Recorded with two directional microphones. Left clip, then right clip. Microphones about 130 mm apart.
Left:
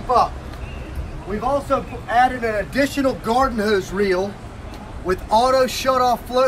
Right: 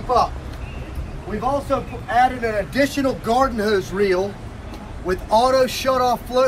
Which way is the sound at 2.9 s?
10° left (ahead or behind).